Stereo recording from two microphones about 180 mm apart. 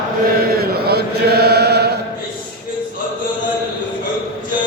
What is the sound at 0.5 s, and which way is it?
Chant, 60° right (ahead or behind).